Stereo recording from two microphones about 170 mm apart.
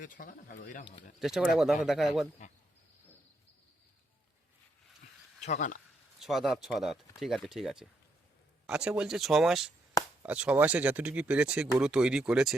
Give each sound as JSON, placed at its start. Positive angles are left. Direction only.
{"t": 0.0, "sound": "speech", "side_deg": 50}
{"t": 1.2, "sound": "speech", "side_deg": 0}
{"t": 5.4, "sound": "speech", "side_deg": 45}
{"t": 6.1, "sound": "speech", "side_deg": 0}